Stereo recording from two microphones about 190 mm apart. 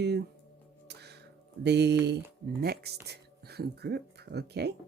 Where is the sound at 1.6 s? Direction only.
65° right (ahead or behind).